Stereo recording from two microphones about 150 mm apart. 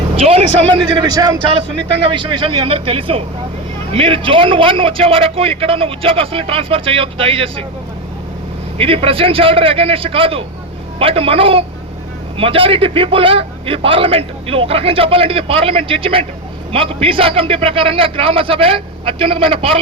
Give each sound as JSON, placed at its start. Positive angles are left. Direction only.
{"t": 0.2, "sound": "a man's voice", "side_deg": -40}
{"t": 8.8, "sound": "a man's voice", "side_deg": -40}